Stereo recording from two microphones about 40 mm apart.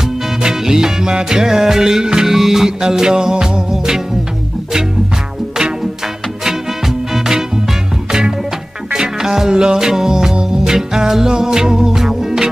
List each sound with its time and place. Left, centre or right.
0.4 s music: centre
6.4 s swing music: centre
8.9 s music: centre